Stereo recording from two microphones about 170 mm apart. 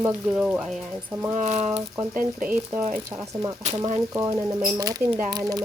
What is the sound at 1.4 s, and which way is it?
Speech, 40° right (ahead or behind).